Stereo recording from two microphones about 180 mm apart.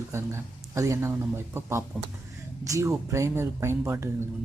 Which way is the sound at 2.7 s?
15° right (ahead or behind).